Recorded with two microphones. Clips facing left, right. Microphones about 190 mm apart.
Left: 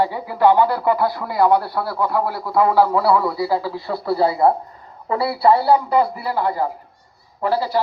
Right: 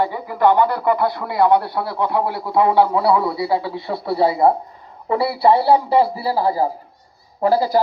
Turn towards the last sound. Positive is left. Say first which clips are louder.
# right 4 dB
turn(degrees=-40)  # may be behind; listen again after turning